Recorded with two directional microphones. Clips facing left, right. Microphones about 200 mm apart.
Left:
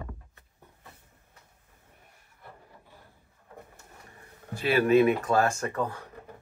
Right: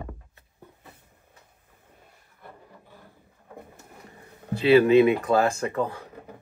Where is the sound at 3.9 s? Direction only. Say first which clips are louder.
Right 5 dB; 20° right (ahead or behind).